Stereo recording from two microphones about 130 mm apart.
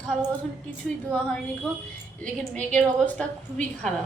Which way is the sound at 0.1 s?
5° left (ahead or behind).